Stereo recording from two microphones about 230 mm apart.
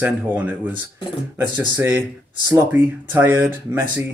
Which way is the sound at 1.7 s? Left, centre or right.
Centre.